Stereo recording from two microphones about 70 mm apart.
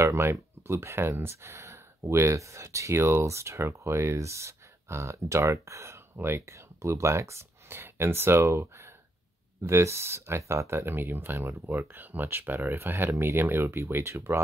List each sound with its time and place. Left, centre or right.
0.0 s speech: right